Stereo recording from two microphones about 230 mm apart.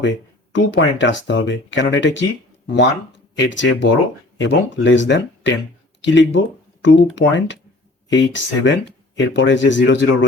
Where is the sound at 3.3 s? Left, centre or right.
Left.